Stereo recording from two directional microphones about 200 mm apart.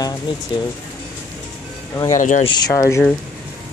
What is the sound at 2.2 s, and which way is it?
Speech, 40° left (ahead or behind).